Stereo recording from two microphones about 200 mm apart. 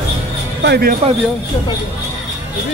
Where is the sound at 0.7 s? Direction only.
50° right (ahead or behind).